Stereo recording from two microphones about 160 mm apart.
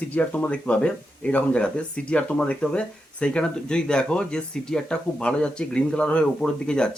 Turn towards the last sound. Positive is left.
turn(degrees=5)  # may be behind; listen again after turning